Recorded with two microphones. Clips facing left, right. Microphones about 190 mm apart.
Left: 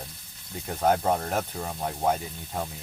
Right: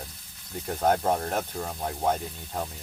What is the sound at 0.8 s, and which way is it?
Speech, 5° left (ahead or behind).